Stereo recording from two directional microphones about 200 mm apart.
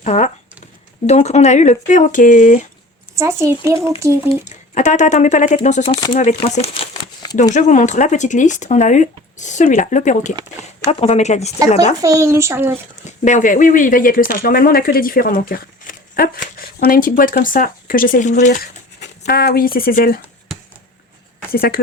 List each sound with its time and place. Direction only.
0.0 s speech: 35° left (ahead or behind)
3.2 s a child's voice: 15° right (ahead or behind)
4.3 s speech: 35° left (ahead or behind)
6.1 s crumpling: 35° left (ahead or behind)
7.5 s speech: 40° left (ahead or behind)
10.3 s speech: 15° right (ahead or behind)
11.0 s speech: 35° left (ahead or behind)
12.0 s a child's voice: 15° right (ahead or behind)
13.1 s speech: 40° left (ahead or behind)
19.2 s speech: 50° left (ahead or behind)
21.5 s speech: 45° left (ahead or behind)